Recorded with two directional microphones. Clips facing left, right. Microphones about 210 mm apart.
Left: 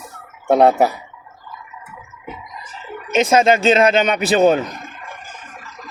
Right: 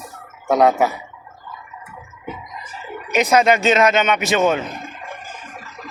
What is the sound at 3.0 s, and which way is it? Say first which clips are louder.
Speech: left 1 dB; 25° left (ahead or behind).